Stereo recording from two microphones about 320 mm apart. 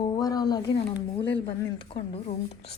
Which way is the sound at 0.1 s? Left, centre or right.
Centre.